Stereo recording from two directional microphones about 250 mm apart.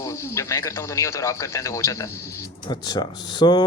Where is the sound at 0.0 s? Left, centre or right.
Centre.